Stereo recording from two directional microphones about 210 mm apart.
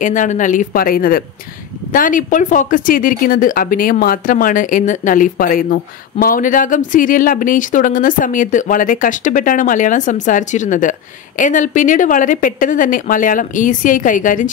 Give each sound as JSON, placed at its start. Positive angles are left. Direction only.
{"t": 0.0, "sound": "speech", "side_deg": 35}